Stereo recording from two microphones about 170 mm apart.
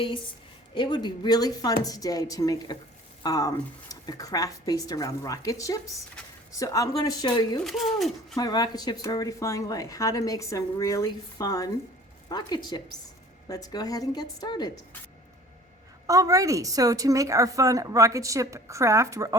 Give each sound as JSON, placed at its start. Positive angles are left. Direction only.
{"t": 0.7, "sound": "speech", "side_deg": 25}
{"t": 7.6, "sound": "speech", "side_deg": 0}
{"t": 8.4, "sound": "speech", "side_deg": 25}
{"t": 16.0, "sound": "a woman's voice", "side_deg": -20}